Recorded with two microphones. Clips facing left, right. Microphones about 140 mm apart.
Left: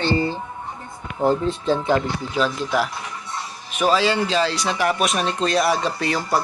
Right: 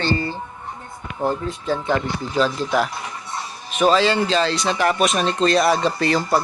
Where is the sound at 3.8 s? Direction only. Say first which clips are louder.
Right 2 dB; 10° left (ahead or behind).